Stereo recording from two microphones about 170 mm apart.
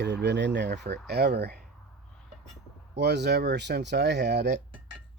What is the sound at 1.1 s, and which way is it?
Speech, 70° right (ahead or behind).